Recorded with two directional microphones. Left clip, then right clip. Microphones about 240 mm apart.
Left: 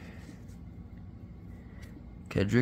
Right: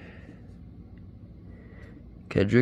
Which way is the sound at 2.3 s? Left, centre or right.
Centre.